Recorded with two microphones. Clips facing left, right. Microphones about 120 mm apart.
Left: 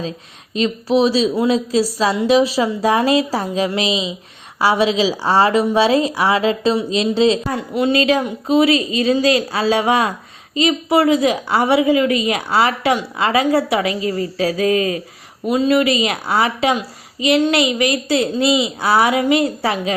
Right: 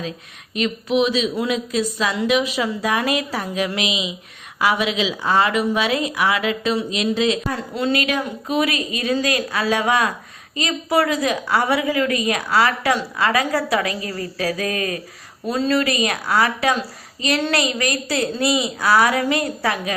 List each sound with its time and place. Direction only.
0.5 s a woman's voice: 30° left (ahead or behind)
15.4 s a woman's voice: 15° left (ahead or behind)